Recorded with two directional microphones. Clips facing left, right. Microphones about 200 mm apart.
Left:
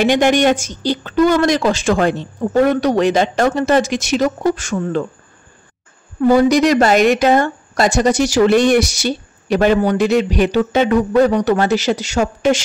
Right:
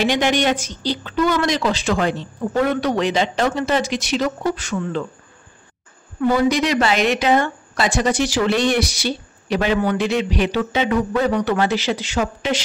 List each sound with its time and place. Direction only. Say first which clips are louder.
0.0 s a woman's voice: left 5 dB; 50° left (ahead or behind)
6.2 s a woman's voice: left 6 dB; 40° left (ahead or behind)